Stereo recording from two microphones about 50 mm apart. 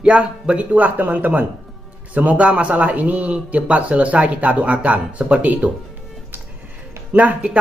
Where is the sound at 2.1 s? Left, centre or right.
Right.